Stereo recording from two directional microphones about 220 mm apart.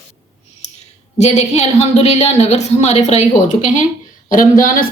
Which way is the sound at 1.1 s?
30° left (ahead or behind).